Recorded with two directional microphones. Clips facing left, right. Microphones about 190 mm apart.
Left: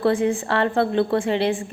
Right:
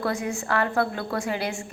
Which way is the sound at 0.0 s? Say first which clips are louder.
Left 8 dB; 30° left (ahead or behind).